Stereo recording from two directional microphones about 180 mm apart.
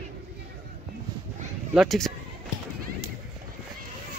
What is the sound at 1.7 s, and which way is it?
Speech, centre (ahead or behind).